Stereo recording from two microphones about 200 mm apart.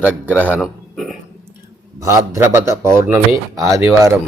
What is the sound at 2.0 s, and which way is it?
Speech, 15° right (ahead or behind).